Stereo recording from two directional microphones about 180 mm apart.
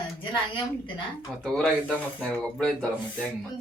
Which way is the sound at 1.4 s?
5° left (ahead or behind).